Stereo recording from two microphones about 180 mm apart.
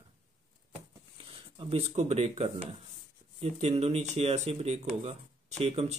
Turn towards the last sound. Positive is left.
turn(degrees=-35)  # may be behind; listen again after turning